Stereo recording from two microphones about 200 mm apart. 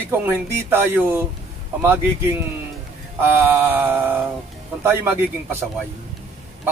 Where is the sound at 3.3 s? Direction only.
10° right (ahead or behind).